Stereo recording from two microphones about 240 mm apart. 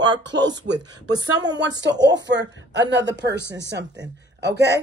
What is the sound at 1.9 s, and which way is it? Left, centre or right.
Speech, right.